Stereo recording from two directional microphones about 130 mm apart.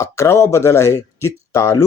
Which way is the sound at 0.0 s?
20° left (ahead or behind).